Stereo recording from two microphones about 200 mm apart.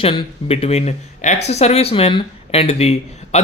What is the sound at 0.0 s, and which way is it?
A man's voice, 25° left (ahead or behind).